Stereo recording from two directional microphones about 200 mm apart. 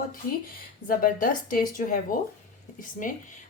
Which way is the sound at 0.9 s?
45° left (ahead or behind).